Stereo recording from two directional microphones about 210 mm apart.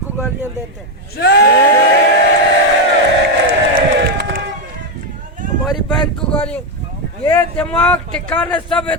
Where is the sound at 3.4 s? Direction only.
45° right (ahead or behind).